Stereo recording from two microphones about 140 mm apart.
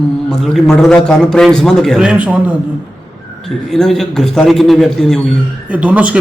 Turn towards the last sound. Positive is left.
turn(degrees=-10)  # may be behind; listen again after turning